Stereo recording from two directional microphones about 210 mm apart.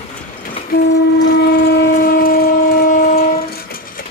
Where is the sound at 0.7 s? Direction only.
45° left (ahead or behind).